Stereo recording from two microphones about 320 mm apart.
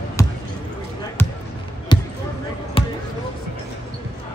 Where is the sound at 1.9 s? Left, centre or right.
Centre.